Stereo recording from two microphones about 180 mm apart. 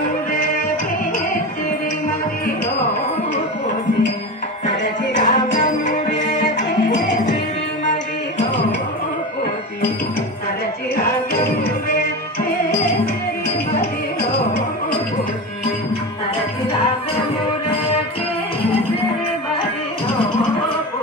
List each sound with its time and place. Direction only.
4.6 s music: 45° left (ahead or behind)
13.7 s music: 60° left (ahead or behind)